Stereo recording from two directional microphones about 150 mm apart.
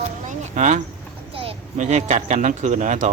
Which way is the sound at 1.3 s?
40° right (ahead or behind).